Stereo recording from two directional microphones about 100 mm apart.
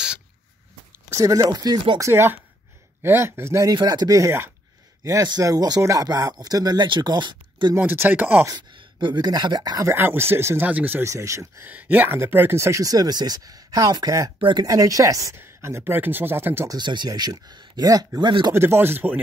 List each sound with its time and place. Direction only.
1.1 s speech: 35° right (ahead or behind)
2.0 s speech: 25° right (ahead or behind)
3.7 s speech: 45° right (ahead or behind); by 4.5 s 30° right (ahead or behind)
5.0 s speech: 40° right (ahead or behind)
7.7 s speech: 20° right (ahead or behind)
8.7 s speech: 50° right (ahead or behind)
9.9 s speech: 25° right (ahead or behind)
11.1 s speech: 30° right (ahead or behind)
11.6 s speech: 15° right (ahead or behind); by 14.3 s 40° right (ahead or behind)
14.4 s speech: 50° right (ahead or behind)
14.7 s speech: 35° right (ahead or behind)
16.6 s speech: 45° right (ahead or behind)
18.5 s speech: 25° right (ahead or behind)